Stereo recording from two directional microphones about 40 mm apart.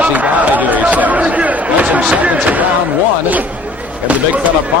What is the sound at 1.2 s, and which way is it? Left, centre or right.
Chatter, right.